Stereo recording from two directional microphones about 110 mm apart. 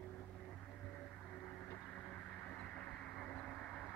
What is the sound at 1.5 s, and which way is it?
Vehicle, 10° left (ahead or behind).